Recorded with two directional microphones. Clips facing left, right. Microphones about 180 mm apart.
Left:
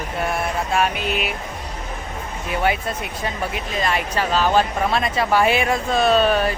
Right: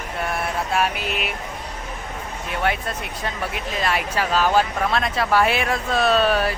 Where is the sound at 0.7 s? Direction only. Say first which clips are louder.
Left 3 dB; 5° right (ahead or behind).